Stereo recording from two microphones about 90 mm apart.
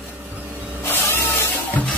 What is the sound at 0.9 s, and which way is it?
Spray, 30° left (ahead or behind).